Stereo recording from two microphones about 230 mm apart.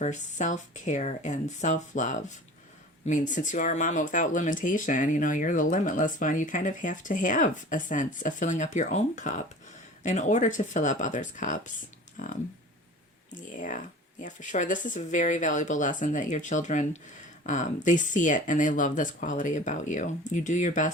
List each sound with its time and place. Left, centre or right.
0.0 s speech: left
13.5 s speech: left